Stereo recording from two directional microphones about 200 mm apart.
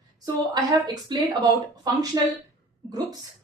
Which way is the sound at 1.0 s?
20° right (ahead or behind).